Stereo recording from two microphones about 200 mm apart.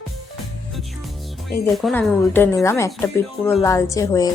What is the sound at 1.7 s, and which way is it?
Speech, 5° left (ahead or behind).